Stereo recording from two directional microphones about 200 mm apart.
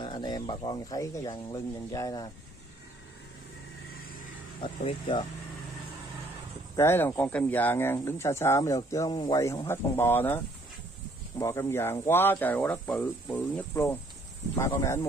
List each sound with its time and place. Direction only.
0.0 s speech: 20° left (ahead or behind)
4.6 s speech: 25° left (ahead or behind)
6.8 s speech: 10° left (ahead or behind)